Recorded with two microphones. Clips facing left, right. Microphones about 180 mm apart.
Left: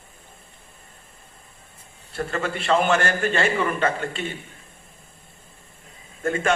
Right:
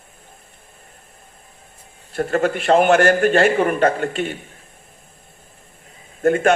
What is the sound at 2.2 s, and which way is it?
A man's voice, 45° right (ahead or behind).